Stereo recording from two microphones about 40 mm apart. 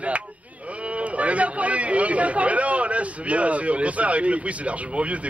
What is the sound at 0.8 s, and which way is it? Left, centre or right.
Speech, right.